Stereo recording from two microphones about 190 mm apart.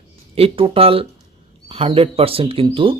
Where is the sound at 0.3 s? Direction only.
30° right (ahead or behind).